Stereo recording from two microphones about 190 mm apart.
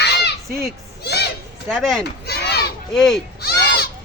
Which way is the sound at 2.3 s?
60° left (ahead or behind).